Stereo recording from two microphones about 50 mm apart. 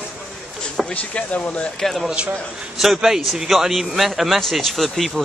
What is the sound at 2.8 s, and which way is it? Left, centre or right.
A man's voice, centre.